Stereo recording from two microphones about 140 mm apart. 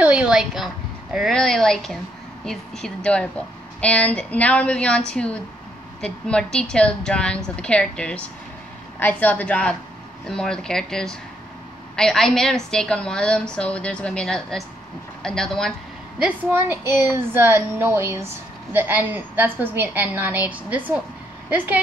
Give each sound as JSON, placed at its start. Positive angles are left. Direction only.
{"t": 0.0, "sound": "a woman's voice", "side_deg": -10}
{"t": 16.2, "sound": "a woman's voice", "side_deg": -10}